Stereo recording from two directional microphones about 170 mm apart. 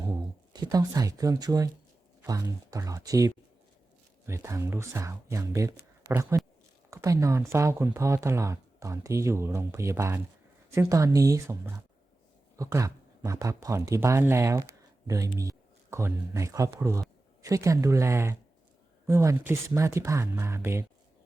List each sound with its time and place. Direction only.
0.0 s speech: 20° right (ahead or behind)